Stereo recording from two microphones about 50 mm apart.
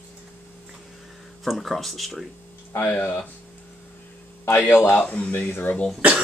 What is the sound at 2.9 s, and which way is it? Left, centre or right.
Speech, left.